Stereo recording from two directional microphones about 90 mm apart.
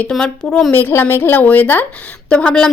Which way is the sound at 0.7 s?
25° left (ahead or behind).